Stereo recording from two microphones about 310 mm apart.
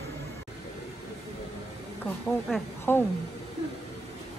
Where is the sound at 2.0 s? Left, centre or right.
Centre.